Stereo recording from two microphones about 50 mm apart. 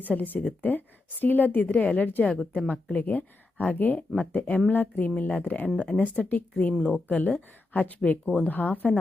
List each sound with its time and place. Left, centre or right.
0.0 s a woman's voice: left